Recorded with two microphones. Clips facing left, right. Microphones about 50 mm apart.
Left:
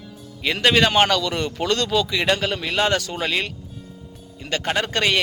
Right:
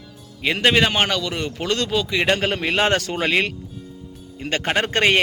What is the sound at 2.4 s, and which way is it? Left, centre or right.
A man's voice, right.